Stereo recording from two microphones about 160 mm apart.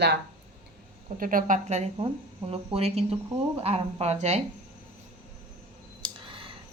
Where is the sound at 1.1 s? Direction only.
60° right (ahead or behind); by 4.4 s 45° right (ahead or behind).